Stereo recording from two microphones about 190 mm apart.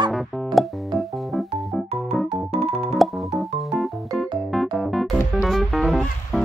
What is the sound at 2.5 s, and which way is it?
Music, 30° right (ahead or behind).